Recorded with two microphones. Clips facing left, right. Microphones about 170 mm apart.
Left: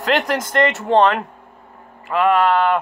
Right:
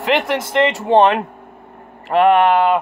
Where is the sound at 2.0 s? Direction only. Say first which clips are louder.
Right 4 dB; 25° right (ahead or behind).